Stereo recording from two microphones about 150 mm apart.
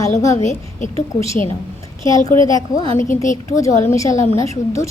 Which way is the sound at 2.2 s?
25° left (ahead or behind).